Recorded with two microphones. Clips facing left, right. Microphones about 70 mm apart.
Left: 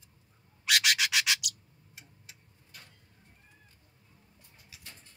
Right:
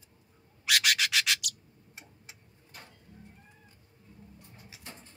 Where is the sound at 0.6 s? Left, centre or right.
Centre.